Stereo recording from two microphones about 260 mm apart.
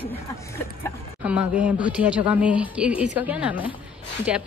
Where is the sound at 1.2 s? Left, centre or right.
Centre.